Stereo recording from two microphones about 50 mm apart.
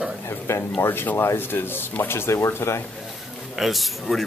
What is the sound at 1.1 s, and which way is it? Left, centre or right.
Speech, left.